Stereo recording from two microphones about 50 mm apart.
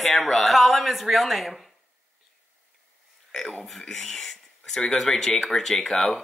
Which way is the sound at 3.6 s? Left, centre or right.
Centre.